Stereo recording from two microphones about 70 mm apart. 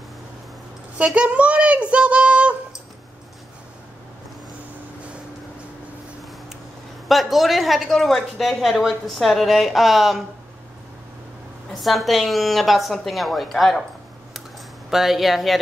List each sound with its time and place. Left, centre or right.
0.9 s speech: centre
7.1 s a woman's voice: centre
11.8 s a woman's voice: centre
14.9 s a woman's voice: centre